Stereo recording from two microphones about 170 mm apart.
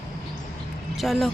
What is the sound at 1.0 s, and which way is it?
Speech, centre (ahead or behind).